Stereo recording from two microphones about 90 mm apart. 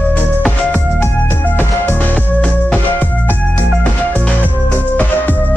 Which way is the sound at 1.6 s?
20° left (ahead or behind).